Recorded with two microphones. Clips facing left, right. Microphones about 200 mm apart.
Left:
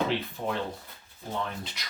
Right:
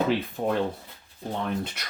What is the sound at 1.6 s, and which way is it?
Speech, 55° right (ahead or behind).